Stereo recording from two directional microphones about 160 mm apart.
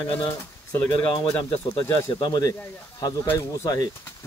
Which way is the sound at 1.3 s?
30° left (ahead or behind).